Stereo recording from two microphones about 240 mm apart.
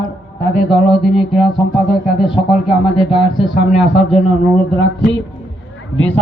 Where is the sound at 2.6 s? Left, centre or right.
Left.